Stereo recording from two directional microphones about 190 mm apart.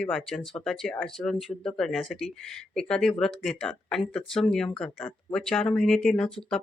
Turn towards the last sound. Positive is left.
turn(degrees=5)  # may be behind; listen again after turning